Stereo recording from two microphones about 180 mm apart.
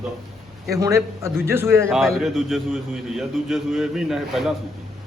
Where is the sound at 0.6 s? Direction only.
15° right (ahead or behind).